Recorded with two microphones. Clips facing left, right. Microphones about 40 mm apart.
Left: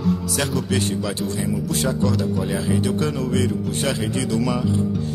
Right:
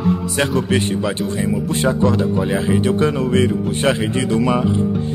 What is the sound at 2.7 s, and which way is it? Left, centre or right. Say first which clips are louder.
Music: right 6 dB; right.